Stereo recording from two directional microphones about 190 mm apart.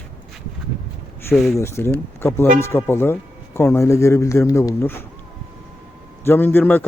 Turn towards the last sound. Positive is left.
turn(degrees=10)  # may be behind; listen again after turning